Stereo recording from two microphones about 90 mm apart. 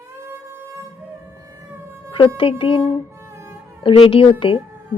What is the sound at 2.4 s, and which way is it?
Speech, 80° left.